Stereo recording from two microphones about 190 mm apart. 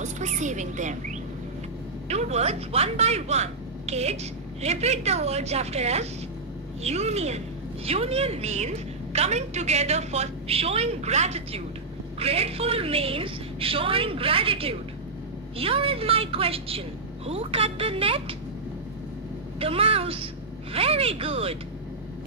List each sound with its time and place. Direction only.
0.0 s a woman's voice: 40° right (ahead or behind)
19.6 s a woman's voice: 30° right (ahead or behind)